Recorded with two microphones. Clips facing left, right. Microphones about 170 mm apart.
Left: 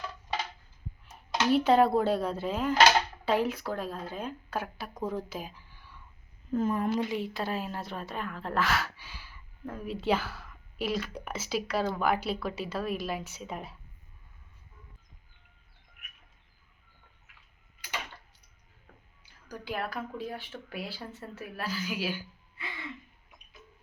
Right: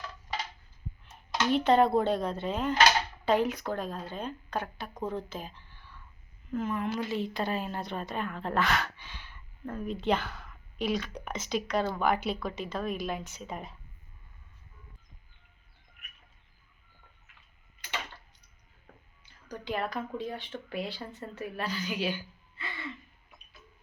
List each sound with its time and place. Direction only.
1.5 s a woman's voice: 5° left (ahead or behind)
6.5 s speech: 35° left (ahead or behind)
7.1 s a woman's voice: 5° left (ahead or behind)
19.2 s a woman's voice: 5° left (ahead or behind)